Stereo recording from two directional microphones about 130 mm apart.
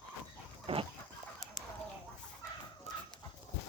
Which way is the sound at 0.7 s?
50° right (ahead or behind).